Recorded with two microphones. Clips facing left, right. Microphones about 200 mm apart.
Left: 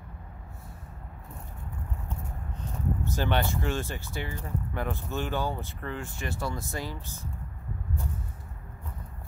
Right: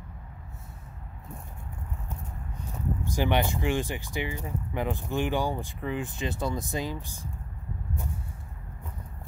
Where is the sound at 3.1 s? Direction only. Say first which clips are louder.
Right 3 dB; 15° right (ahead or behind).